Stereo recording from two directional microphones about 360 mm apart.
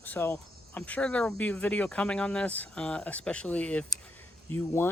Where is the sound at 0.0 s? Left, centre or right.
Centre.